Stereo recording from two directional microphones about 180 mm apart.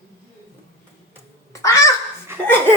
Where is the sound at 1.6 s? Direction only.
15° left (ahead or behind).